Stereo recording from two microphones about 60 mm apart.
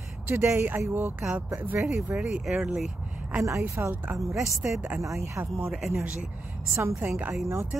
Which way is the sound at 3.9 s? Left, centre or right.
Right.